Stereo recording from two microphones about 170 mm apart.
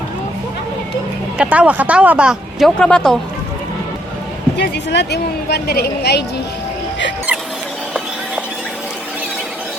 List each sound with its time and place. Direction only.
1.4 s speech: 10° right (ahead or behind)
4.5 s a woman's voice: 85° left